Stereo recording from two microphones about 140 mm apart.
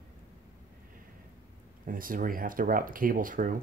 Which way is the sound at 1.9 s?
80° right.